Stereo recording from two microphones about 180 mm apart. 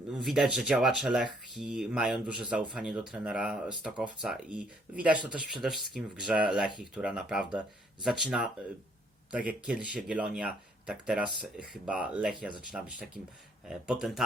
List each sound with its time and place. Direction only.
0.1 s speech: centre (ahead or behind)